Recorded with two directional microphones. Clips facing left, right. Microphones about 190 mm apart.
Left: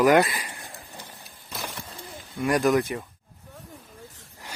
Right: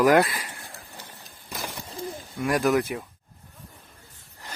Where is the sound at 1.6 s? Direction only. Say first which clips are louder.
Even; 15° right (ahead or behind).